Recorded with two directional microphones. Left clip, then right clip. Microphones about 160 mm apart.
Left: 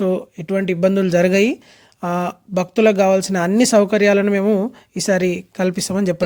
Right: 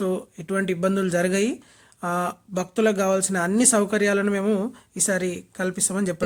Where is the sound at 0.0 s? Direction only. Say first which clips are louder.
Left 7 dB; 25° left (ahead or behind).